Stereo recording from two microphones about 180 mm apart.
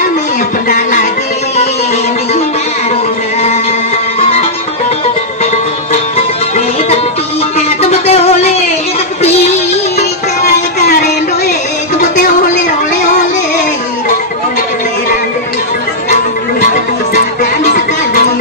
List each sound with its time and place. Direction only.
0.7 s music: 45° left (ahead or behind)
6.1 s music: 35° left (ahead or behind)